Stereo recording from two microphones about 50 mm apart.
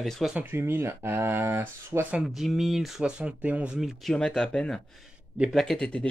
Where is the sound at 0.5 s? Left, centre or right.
Right.